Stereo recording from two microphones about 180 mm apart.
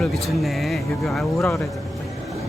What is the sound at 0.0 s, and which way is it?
Speech, centre (ahead or behind).